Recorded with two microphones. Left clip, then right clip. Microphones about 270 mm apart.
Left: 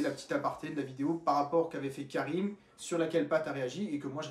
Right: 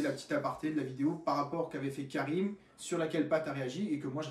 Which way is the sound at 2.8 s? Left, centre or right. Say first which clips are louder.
Left 2 dB; centre.